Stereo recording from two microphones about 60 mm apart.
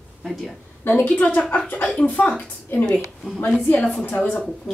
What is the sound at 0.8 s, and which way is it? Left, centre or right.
A woman's voice, left.